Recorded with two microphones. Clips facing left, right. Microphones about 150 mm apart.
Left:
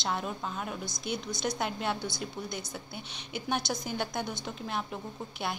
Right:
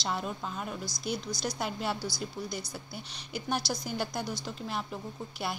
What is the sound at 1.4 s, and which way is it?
A woman's voice, 5° right (ahead or behind).